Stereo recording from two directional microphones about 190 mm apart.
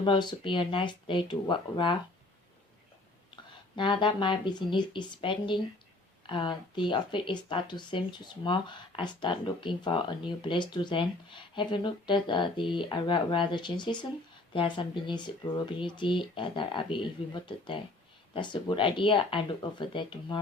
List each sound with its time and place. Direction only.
0.0 s speech: 25° left (ahead or behind)
3.8 s speech: 25° left (ahead or behind)